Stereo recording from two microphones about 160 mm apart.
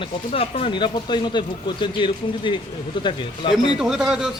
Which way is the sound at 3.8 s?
5° right (ahead or behind).